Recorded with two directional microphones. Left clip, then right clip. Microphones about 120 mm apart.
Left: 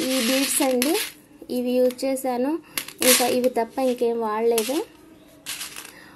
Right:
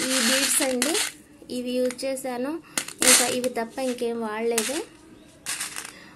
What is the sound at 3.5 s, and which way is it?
Speech, 40° left (ahead or behind).